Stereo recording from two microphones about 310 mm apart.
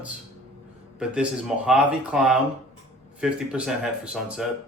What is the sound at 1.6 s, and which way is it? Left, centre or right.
Speech, centre.